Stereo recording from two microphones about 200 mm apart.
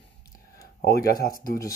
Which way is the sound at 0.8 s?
50° left (ahead or behind).